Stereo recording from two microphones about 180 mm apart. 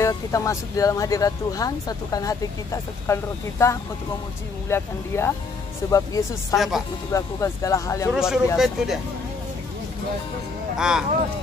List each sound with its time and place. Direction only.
0.0 s speech: 15° left (ahead or behind)
6.5 s speech: centre (ahead or behind)
7.1 s speech: 15° left (ahead or behind)
8.1 s speech: 5° right (ahead or behind)
10.8 s speech: 5° right (ahead or behind)